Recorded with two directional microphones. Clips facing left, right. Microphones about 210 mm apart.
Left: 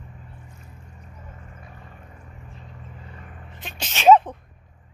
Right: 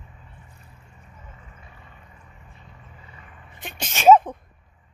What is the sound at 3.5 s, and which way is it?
Sneeze, 55° right (ahead or behind).